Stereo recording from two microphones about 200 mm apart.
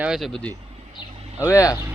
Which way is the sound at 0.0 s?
Centre (ahead or behind).